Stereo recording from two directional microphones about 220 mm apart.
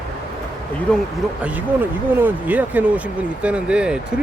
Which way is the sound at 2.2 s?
5° right (ahead or behind).